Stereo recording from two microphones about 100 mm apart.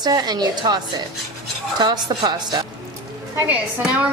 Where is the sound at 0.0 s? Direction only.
45° right (ahead or behind).